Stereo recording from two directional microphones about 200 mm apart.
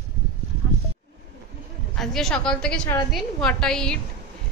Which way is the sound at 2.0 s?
Centre (ahead or behind).